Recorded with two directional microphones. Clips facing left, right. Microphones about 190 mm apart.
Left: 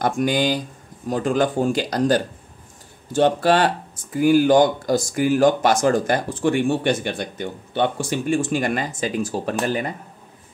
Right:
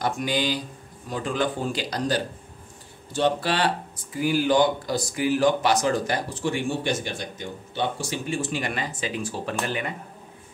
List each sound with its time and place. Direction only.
0.0 s speech: 50° left (ahead or behind)